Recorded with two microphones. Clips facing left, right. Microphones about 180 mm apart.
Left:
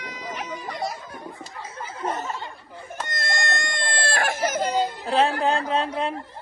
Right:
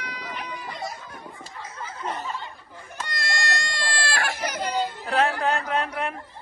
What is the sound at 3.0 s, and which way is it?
Baby cry, 50° left (ahead or behind).